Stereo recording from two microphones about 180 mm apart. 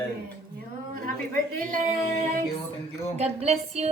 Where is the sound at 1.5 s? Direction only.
45° right (ahead or behind).